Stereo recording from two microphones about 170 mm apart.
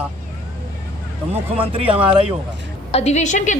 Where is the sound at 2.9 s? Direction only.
40° left (ahead or behind).